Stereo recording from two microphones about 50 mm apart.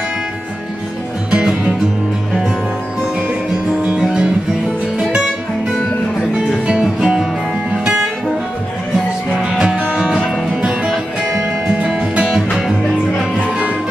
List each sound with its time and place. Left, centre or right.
1.3 s music: centre
3.8 s music: centre
9.4 s music: centre